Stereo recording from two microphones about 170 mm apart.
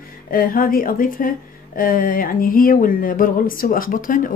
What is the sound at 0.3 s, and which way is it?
Speech, 55° left (ahead or behind).